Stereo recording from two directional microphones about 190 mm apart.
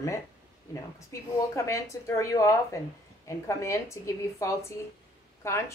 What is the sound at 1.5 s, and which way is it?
Speech, 15° left (ahead or behind).